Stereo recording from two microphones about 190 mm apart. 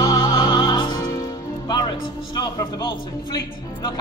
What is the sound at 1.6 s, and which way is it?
A man's voice, 20° left (ahead or behind).